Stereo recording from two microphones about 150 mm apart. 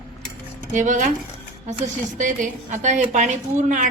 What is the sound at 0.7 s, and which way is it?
Speech, 55° right (ahead or behind).